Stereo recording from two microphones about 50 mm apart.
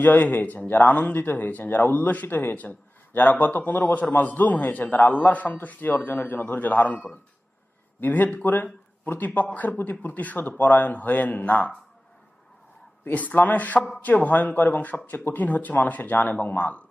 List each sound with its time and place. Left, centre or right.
0.0 s speech: left
13.1 s speech: left